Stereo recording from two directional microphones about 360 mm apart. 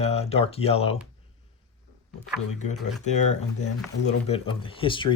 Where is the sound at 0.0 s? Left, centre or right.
Centre.